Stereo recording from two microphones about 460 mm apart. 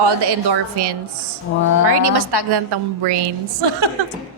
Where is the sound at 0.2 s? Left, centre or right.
Right.